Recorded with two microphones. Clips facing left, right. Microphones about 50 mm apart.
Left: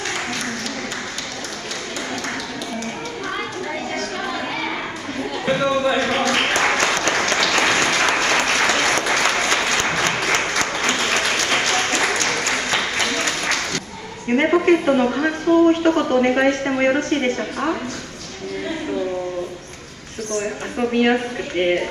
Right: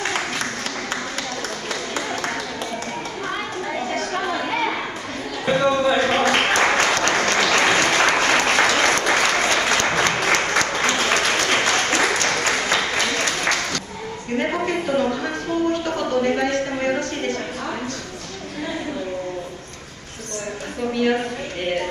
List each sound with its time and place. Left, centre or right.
3.9 s chatter: centre
5.4 s a man's voice: centre
6.2 s applause: centre
14.6 s speech: left
20.9 s speech: left